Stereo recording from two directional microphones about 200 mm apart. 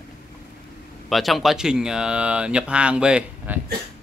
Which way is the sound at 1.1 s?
Centre (ahead or behind).